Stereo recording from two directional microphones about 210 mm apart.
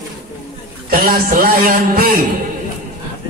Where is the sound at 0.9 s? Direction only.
40° right (ahead or behind).